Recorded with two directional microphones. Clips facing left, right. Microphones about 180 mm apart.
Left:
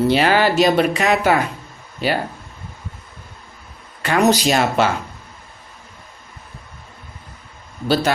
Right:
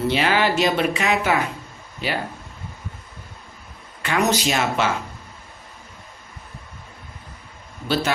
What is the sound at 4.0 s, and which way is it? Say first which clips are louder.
Speech: left 5 dB; 35° left (ahead or behind).